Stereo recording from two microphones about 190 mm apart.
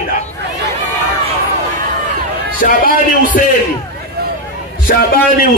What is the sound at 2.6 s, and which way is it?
Speech, 50° left (ahead or behind).